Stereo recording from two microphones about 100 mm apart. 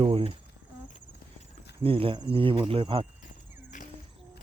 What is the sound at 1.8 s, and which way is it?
Speech, 60° right (ahead or behind).